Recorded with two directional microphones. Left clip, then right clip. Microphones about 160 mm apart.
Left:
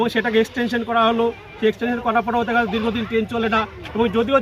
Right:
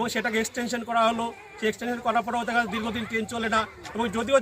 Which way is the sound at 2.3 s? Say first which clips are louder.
Left 6 dB; 10° right (ahead or behind).